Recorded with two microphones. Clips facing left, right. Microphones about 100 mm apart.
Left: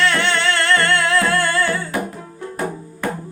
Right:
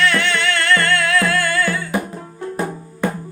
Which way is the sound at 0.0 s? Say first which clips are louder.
Even; 30° left (ahead or behind).